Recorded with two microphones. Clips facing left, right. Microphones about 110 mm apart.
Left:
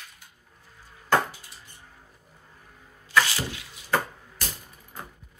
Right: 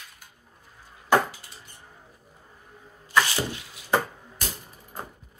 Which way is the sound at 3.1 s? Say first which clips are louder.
Right 1 dB; 20° right (ahead or behind).